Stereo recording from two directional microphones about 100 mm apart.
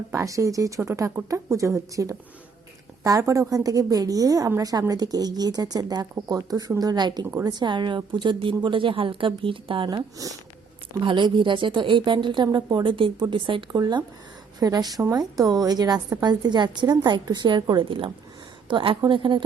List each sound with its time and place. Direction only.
0.1 s a woman's voice: 30° right (ahead or behind)
7.3 s a woman's voice: 30° right (ahead or behind)
7.5 s a woman's voice: 50° right (ahead or behind)
10.2 s a woman's voice: 35° right (ahead or behind)
11.0 s a woman's voice: 55° right (ahead or behind)
12.5 s a woman's voice: 40° right (ahead or behind)